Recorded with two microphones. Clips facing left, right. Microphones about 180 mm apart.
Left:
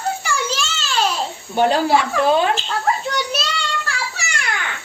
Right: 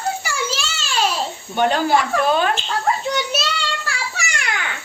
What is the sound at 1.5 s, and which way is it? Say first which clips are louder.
Speech: left 1 dB; 35° left (ahead or behind).